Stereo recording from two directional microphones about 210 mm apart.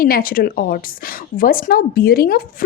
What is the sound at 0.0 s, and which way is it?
A woman's voice, 45° left (ahead or behind).